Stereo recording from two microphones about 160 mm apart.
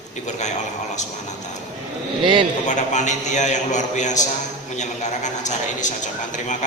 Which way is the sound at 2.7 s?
50° left (ahead or behind).